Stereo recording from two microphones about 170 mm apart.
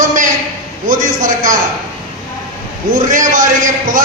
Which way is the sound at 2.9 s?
50° right (ahead or behind).